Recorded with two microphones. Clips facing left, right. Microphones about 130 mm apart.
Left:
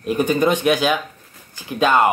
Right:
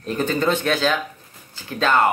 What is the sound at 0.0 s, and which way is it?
Speech, 15° left (ahead or behind).